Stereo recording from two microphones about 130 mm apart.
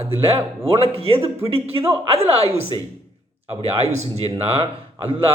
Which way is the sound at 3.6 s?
50° right (ahead or behind).